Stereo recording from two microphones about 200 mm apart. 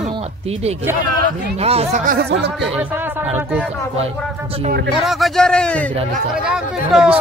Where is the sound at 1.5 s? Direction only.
30° right (ahead or behind).